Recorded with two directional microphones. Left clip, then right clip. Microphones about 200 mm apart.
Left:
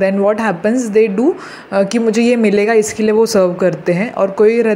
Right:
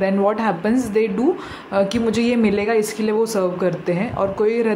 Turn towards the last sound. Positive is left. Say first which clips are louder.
# left 7 dB
turn(degrees=20)  # may be behind; listen again after turning